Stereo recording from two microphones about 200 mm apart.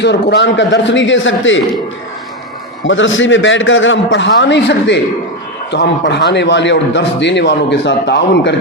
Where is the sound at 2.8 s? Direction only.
70° left (ahead or behind).